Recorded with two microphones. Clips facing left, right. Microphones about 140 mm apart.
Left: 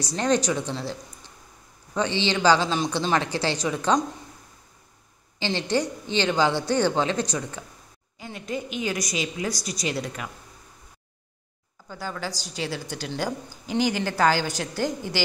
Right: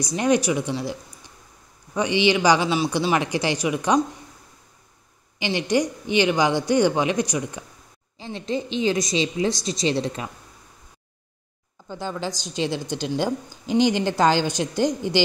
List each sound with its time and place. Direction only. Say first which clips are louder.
0.0 s a woman's voice: right 3 dB; 10° right (ahead or behind)
5.4 s a woman's voice: right 3 dB; 15° right (ahead or behind)
8.2 s a woman's voice: right 4 dB; 25° right (ahead or behind)
11.9 s a woman's voice: right 4 dB; 20° right (ahead or behind)